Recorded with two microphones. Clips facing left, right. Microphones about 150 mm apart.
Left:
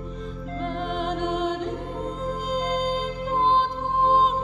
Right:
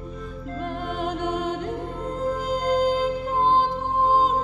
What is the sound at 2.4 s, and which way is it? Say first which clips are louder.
Music: right 4 dB; 10° right (ahead or behind).